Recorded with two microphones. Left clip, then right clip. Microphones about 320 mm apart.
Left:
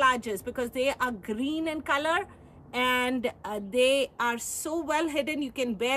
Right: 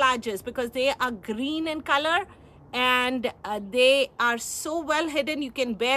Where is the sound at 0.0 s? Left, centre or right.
Centre.